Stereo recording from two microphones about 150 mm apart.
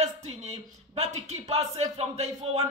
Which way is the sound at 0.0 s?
45° right (ahead or behind).